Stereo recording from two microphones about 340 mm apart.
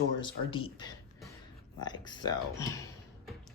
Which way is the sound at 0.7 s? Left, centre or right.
Centre.